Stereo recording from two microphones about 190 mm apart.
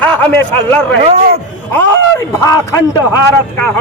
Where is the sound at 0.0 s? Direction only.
10° left (ahead or behind).